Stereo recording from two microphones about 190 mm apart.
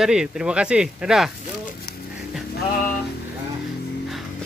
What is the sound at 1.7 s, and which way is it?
Music, 55° left (ahead or behind).